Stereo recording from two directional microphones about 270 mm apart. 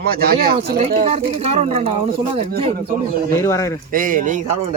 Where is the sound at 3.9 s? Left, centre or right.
Right.